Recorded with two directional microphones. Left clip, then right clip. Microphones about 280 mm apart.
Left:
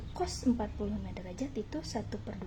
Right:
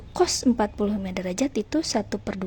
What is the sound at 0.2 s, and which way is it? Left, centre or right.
A woman's voice, right.